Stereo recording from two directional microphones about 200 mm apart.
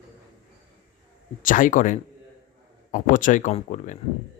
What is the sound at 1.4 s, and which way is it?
Speech, 40° left (ahead or behind).